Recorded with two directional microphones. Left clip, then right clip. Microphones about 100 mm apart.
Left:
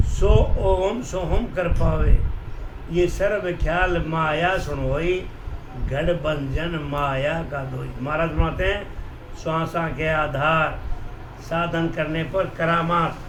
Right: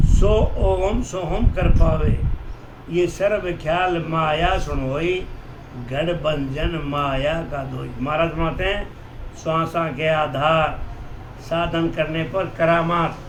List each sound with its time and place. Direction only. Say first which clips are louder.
0.2 s a man's voice: right 1 dB; centre (ahead or behind)
2.9 s a man's voice: right 2 dB; centre (ahead or behind)
12.5 s a man's voice: right 4 dB; 20° left (ahead or behind)